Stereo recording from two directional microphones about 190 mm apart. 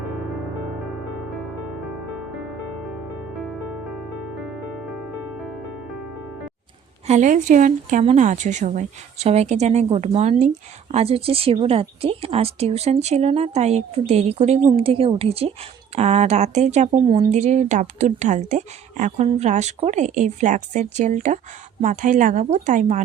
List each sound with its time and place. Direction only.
7.1 s speech: 40° right (ahead or behind)